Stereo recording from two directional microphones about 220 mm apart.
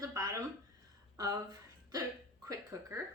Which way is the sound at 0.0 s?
15° right (ahead or behind).